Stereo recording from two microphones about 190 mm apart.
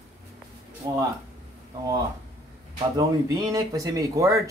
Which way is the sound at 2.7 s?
20° right (ahead or behind).